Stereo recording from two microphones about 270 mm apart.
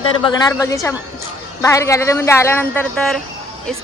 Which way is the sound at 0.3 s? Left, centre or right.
Centre.